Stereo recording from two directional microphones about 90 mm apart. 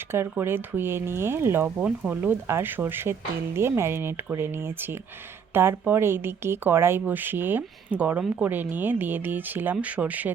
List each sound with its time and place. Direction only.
0.1 s speech: 25° right (ahead or behind)